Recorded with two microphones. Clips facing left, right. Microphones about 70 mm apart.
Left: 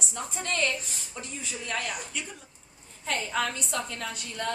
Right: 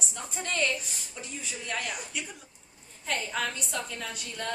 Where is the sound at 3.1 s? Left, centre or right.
Centre.